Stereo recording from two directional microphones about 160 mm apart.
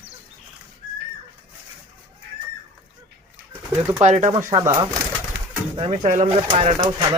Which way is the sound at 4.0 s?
50° right (ahead or behind).